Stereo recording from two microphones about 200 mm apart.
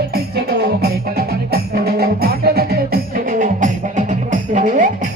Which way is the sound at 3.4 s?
40° right (ahead or behind).